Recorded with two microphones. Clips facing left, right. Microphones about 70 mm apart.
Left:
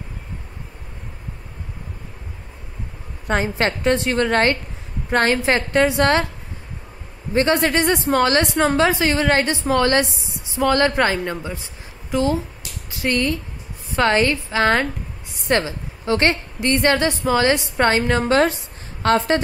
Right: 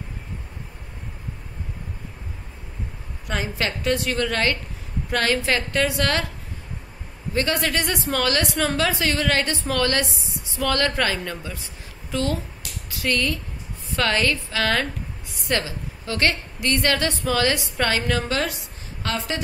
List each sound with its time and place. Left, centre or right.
3.3 s a woman's voice: left
7.3 s a woman's voice: left